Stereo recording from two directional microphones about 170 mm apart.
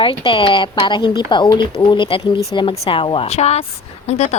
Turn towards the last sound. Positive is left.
turn(degrees=40)  # may be behind; listen again after turning